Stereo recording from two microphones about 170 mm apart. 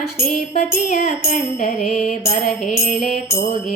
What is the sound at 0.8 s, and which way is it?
Music, 40° left (ahead or behind).